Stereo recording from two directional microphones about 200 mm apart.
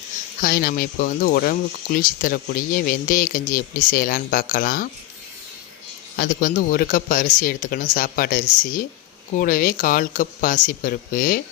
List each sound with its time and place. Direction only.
0.4 s speech: 45° left (ahead or behind)
6.1 s speech: 50° left (ahead or behind)